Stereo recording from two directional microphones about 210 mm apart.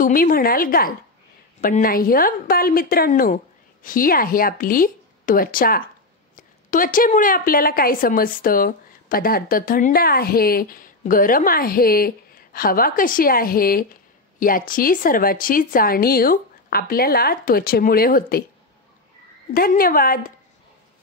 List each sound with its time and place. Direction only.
0.0 s a woman's voice: 40° left (ahead or behind)
19.5 s a woman's voice: 45° left (ahead or behind)